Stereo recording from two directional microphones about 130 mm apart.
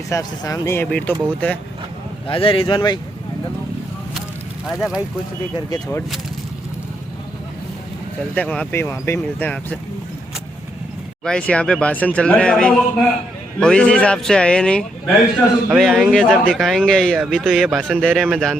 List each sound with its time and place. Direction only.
0.1 s speech: 25° left (ahead or behind)
0.9 s speech: 10° left (ahead or behind)
2.2 s speech: 45° left (ahead or behind)
4.6 s speech: 5° right (ahead or behind)
8.4 s speech: 10° left (ahead or behind)
8.7 s speech: 20° left (ahead or behind)
11.2 s speech: 5° left (ahead or behind)
15.0 s a man's voice: 10° right (ahead or behind)
15.8 s speech: centre (ahead or behind)
17.7 s a man's voice: 10° right (ahead or behind)
18.0 s speech: centre (ahead or behind)